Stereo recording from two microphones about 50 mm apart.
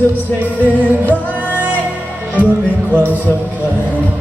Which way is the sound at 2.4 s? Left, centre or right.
Right.